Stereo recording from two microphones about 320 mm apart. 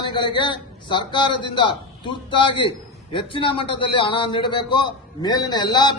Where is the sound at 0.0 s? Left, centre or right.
Centre.